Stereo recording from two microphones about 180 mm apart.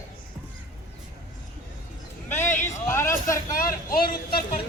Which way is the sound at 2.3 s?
10° left (ahead or behind).